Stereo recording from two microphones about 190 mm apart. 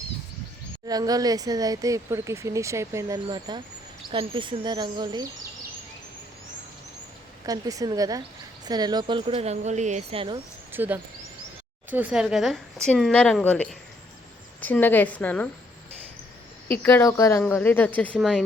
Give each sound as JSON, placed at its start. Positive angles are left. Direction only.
{"t": 0.9, "sound": "speech", "side_deg": -20}
{"t": 7.4, "sound": "speech", "side_deg": -20}
{"t": 10.7, "sound": "a woman's voice", "side_deg": -10}
{"t": 16.6, "sound": "a woman's voice", "side_deg": 10}